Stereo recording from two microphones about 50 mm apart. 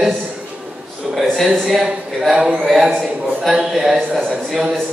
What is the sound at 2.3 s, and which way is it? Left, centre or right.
Speech, centre.